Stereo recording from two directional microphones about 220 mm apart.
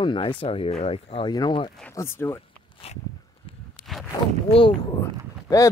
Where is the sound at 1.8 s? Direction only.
10° left (ahead or behind).